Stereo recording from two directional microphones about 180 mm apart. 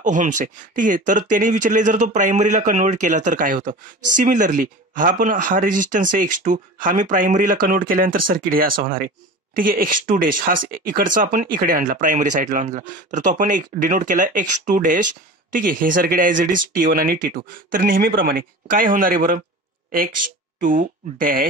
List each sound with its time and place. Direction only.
0.0 s speech: 45° right (ahead or behind)
20.6 s speech: 50° right (ahead or behind)